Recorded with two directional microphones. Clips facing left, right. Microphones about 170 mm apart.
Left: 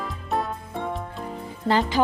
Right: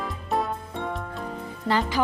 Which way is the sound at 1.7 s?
25° left (ahead or behind).